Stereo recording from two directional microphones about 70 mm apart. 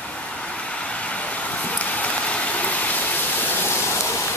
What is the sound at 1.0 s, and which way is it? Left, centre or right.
Vehicle, centre.